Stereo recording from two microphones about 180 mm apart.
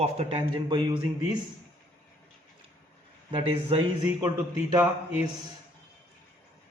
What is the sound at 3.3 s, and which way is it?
Speech, 30° right (ahead or behind).